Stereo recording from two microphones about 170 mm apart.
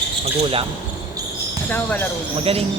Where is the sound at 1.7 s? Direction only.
10° left (ahead or behind).